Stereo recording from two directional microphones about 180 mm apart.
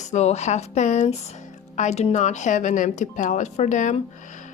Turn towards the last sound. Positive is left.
turn(degrees=40)  # may be behind; listen again after turning